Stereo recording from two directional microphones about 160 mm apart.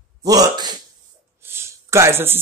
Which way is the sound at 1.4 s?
15° right (ahead or behind).